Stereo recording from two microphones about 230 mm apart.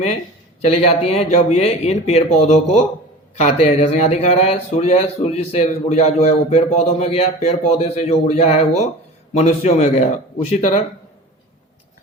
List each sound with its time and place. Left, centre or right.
0.6 s speech: left